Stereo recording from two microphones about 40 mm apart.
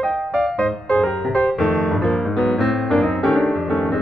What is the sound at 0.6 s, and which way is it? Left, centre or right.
Music, left.